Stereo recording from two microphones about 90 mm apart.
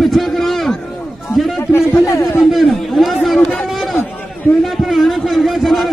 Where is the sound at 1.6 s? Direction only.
30° left (ahead or behind).